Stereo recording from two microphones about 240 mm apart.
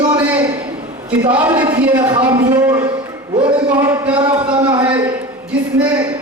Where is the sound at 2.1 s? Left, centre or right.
Centre.